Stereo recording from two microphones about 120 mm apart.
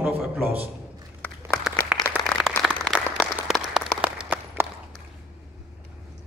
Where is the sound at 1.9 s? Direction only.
10° right (ahead or behind).